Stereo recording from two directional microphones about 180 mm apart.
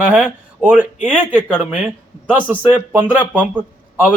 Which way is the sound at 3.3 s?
10° right (ahead or behind).